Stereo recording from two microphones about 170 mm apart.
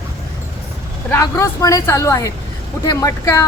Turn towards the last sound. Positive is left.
turn(degrees=20)  # may be behind; listen again after turning